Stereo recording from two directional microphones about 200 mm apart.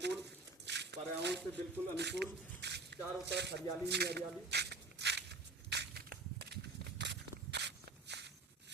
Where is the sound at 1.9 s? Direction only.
60° right (ahead or behind).